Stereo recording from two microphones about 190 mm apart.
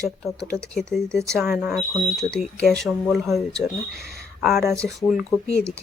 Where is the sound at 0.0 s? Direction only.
Centre (ahead or behind).